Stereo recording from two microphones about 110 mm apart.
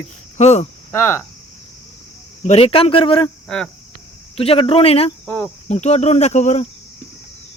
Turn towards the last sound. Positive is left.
turn(degrees=90)